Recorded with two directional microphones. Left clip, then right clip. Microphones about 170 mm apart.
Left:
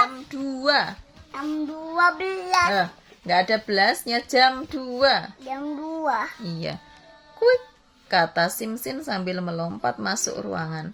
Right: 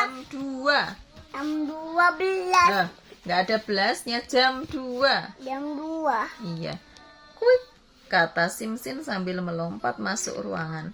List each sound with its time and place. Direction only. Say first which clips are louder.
0.3 s a sound: left 2 dB; 30° left (ahead or behind)
1.3 s child singing: even; 10° right (ahead or behind)
2.6 s speech: even; 35° left (ahead or behind)
5.5 s child singing: left 1 dB; 10° right (ahead or behind)
6.4 s speech: left 3 dB; 35° left (ahead or behind)